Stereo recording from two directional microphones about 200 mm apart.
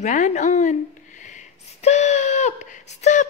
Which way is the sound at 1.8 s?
35° left (ahead or behind).